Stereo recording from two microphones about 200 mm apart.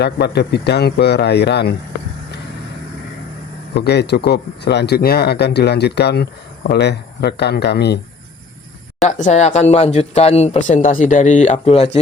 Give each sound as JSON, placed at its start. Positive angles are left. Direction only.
{"t": 0.0, "sound": "speech", "side_deg": 55}
{"t": 3.8, "sound": "speech", "side_deg": 55}
{"t": 9.0, "sound": "speech", "side_deg": 35}